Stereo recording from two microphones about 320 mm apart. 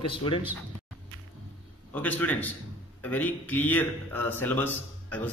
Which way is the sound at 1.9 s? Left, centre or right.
Centre.